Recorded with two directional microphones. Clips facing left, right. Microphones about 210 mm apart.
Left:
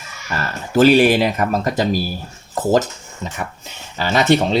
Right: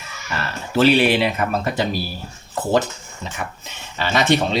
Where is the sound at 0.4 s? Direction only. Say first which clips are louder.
Left 3 dB; 45° left (ahead or behind).